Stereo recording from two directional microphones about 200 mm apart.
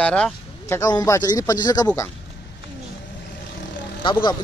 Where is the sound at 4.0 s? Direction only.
25° left (ahead or behind).